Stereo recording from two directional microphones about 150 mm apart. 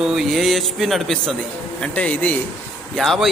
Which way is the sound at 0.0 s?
5° right (ahead or behind).